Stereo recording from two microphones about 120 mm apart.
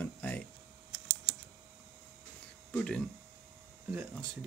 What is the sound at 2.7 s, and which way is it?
Speech, 10° left (ahead or behind).